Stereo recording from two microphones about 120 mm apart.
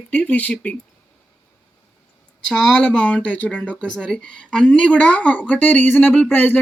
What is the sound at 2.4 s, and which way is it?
Speech, 5° left (ahead or behind).